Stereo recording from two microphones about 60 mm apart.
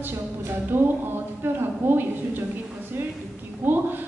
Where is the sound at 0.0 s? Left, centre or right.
Right.